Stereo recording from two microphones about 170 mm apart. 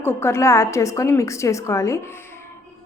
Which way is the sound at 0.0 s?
15° left (ahead or behind).